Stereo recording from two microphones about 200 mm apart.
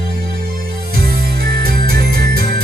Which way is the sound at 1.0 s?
50° right (ahead or behind).